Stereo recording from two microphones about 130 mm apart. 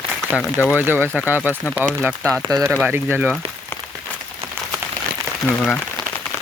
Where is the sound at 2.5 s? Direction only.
30° right (ahead or behind).